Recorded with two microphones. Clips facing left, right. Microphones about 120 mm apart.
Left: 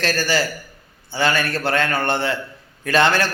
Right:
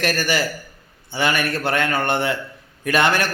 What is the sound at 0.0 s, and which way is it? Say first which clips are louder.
A man's voice: left 1 dB; 20° right (ahead or behind).